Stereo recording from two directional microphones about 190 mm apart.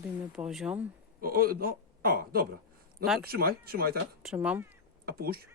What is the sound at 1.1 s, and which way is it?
A woman's voice, 50° right (ahead or behind).